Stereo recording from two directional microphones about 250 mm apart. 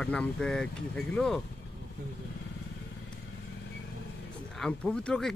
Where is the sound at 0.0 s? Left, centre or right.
Centre.